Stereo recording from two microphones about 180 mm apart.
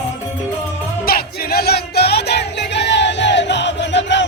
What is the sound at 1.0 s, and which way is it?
Music, 55° left (ahead or behind).